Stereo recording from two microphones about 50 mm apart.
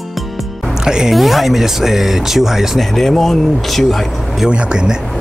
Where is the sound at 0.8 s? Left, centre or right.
Centre.